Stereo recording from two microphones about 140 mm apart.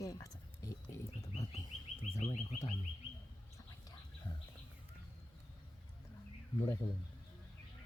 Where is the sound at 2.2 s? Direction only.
50° left (ahead or behind).